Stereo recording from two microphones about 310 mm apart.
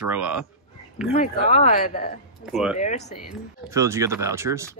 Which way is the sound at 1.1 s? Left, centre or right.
Left.